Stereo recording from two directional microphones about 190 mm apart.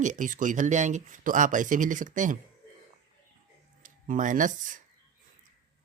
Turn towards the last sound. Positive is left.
turn(degrees=-45)  # may be behind; listen again after turning